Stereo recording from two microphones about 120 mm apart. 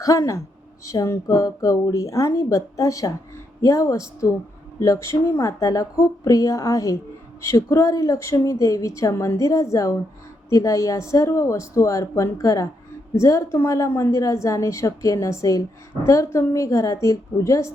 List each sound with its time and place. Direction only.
0.0 s a woman's voice: 25° left (ahead or behind)